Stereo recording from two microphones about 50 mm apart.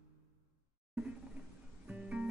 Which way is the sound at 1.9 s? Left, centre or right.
Right.